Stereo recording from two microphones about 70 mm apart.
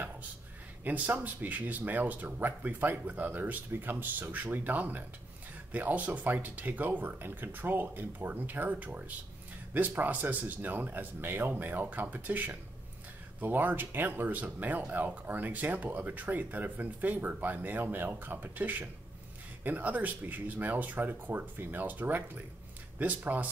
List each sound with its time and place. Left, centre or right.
0.8 s speech: right